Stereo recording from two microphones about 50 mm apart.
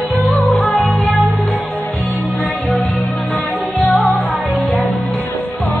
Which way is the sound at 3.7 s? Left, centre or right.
Left.